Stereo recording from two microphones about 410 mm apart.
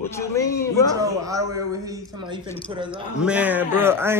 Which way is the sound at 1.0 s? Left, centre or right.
Centre.